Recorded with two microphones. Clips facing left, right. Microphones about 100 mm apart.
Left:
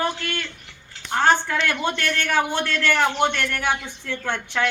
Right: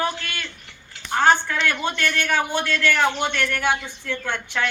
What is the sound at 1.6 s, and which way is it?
A man's voice, 35° left (ahead or behind).